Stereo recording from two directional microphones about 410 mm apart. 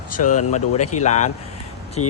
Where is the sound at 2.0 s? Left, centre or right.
Left.